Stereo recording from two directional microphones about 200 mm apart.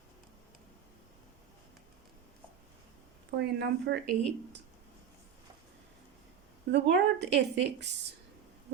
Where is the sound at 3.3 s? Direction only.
55° right (ahead or behind).